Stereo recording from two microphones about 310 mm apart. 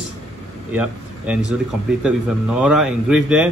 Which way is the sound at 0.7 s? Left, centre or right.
Centre.